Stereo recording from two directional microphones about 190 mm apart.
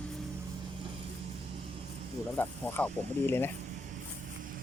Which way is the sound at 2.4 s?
10° left (ahead or behind).